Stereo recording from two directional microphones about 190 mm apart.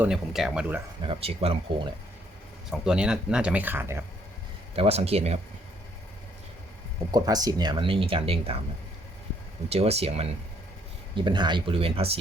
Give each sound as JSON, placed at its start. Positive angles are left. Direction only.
{"t": 0.0, "sound": "speech", "side_deg": 0}
{"t": 1.0, "sound": "speech", "side_deg": -30}
{"t": 2.6, "sound": "speech", "side_deg": -5}
{"t": 4.7, "sound": "speech", "side_deg": -30}
{"t": 7.1, "sound": "speech", "side_deg": -20}
{"t": 9.6, "sound": "speech", "side_deg": -35}